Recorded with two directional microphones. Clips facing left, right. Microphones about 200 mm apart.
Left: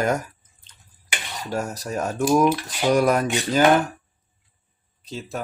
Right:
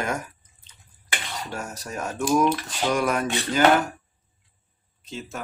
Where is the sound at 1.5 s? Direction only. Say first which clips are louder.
Left 9 dB; 35° left (ahead or behind).